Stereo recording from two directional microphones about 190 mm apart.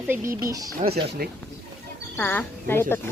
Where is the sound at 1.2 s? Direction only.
55° right (ahead or behind).